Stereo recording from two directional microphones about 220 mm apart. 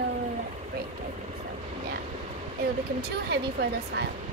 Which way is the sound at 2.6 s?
45° right (ahead or behind).